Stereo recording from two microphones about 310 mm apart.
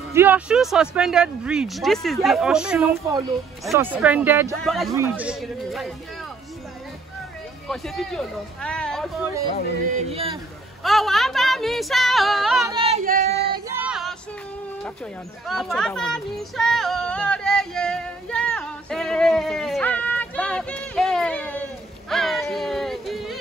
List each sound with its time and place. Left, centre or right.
0.1 s speech: centre
7.6 s speech: centre
9.8 s speech: centre
10.8 s speech: centre
12.7 s child singing: centre
13.7 s female singing: centre
15.4 s a sound: centre
22.1 s music: centre